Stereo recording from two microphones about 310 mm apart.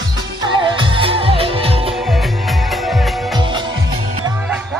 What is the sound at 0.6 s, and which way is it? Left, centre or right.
Music, centre.